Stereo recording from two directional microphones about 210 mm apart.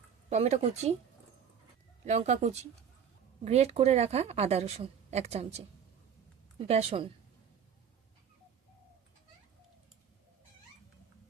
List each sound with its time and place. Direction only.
0.3 s a woman's voice: 30° right (ahead or behind)
2.0 s a woman's voice: 35° right (ahead or behind)
6.7 s speech: 30° right (ahead or behind)